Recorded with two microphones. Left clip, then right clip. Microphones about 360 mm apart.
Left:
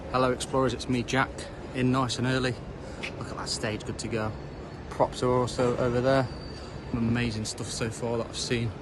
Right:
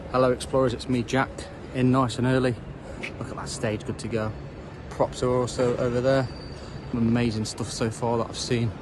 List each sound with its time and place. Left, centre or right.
0.1 s speech: centre
7.1 s speech: centre